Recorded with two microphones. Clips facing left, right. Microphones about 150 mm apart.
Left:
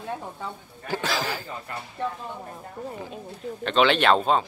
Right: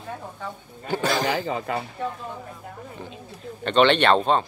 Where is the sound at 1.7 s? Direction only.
90° right.